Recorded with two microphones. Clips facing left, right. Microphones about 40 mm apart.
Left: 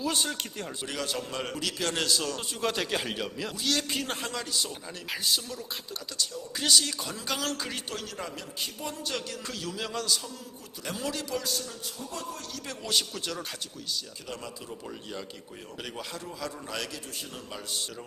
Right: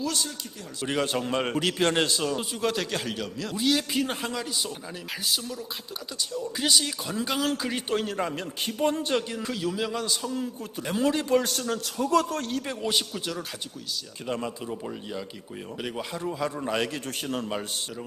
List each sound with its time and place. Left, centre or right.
0.9 s a man's voice: right
2.4 s speech: centre
3.5 s speech: centre
6.6 s speech: centre
7.9 s a man's voice: right
9.4 s speech: centre
10.9 s a man's voice: right
11.9 s a man's voice: right
12.4 s a man's voice: right
12.6 s speech: centre
14.3 s a man's voice: right
15.8 s a man's voice: centre
17.2 s a man's voice: right